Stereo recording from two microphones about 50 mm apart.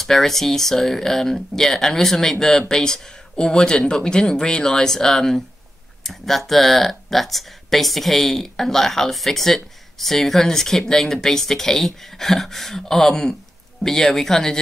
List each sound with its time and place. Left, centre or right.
0.0 s speech: centre